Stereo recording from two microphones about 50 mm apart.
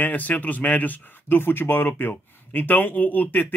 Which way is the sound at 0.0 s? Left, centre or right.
Left.